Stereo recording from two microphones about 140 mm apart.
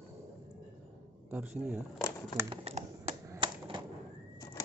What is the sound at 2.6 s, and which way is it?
Speech, 50° right (ahead or behind).